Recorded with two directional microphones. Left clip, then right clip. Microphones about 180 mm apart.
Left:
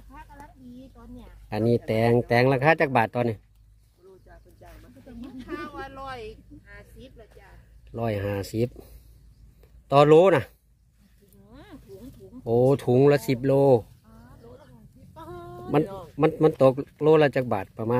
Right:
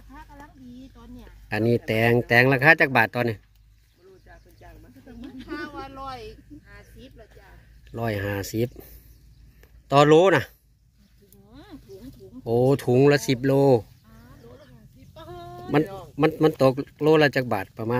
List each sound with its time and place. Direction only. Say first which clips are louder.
1.5 s speech: right 1 dB; centre (ahead or behind)
5.5 s a sound: right 1 dB; 5° left (ahead or behind)
11.4 s snake: right 1 dB; 5° left (ahead or behind)
12.4 s speech: even; 5° left (ahead or behind)
15.1 s sheep: right 1 dB; 65° left (ahead or behind)
15.8 s speech: right 1 dB; 75° left (ahead or behind)
16.2 s speech: even; 5° left (ahead or behind)